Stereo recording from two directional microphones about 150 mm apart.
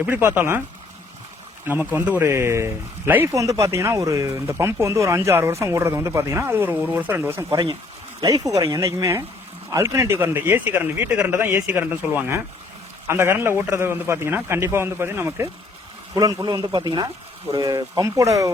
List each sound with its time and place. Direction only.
0.0 s speech: 15° right (ahead or behind)
1.6 s speech: 10° right (ahead or behind)
7.5 s speech: 25° right (ahead or behind)
16.1 s speech: 25° right (ahead or behind)